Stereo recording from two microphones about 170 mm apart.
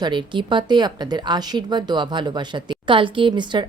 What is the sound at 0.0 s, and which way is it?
Speech, 30° right (ahead or behind).